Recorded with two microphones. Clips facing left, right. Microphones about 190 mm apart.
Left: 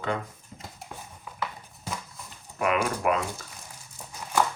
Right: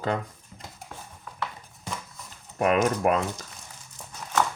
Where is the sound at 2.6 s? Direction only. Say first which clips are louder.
Right 4 dB; 40° right (ahead or behind).